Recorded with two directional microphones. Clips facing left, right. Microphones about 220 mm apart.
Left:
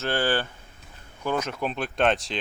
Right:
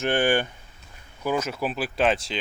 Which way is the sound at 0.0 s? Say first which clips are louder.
Right 3 dB; 15° right (ahead or behind).